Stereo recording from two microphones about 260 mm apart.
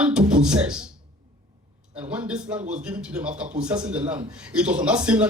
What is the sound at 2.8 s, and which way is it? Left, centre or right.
Speech, centre.